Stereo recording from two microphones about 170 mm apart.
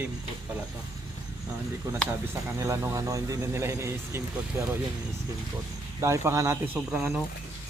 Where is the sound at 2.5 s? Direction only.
15° right (ahead or behind).